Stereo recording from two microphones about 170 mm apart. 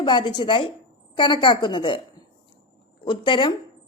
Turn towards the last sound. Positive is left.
turn(degrees=30)  # may be behind; listen again after turning